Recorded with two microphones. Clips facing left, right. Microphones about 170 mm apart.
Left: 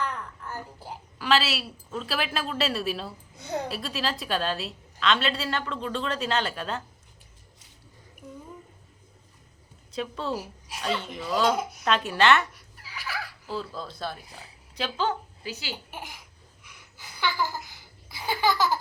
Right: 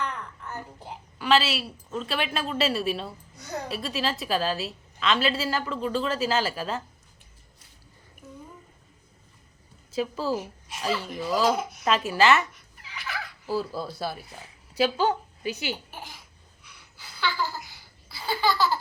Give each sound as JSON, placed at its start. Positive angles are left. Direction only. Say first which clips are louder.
{"t": 0.0, "sound": "a woman's voice", "louder": "left 1 dB", "side_deg": 0}
{"t": 9.9, "sound": "speech", "louder": "right 3 dB", "side_deg": -5}
{"t": 13.5, "sound": "a woman's voice", "louder": "right 5 dB", "side_deg": -10}
{"t": 17.0, "sound": "a sound", "louder": "left 1 dB", "side_deg": 15}
{"t": 17.7, "sound": "baby laughter", "louder": "left 1 dB", "side_deg": 15}